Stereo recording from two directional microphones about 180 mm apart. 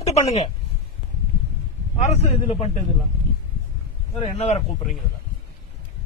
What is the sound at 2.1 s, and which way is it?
Speech, 35° left (ahead or behind).